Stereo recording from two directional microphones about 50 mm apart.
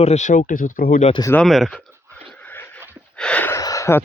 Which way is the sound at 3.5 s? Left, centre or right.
Left.